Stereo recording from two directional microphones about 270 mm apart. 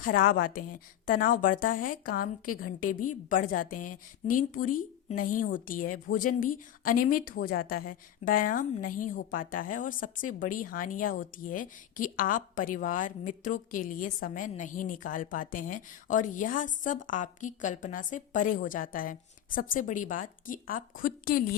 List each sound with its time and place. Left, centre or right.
0.0 s a woman's voice: left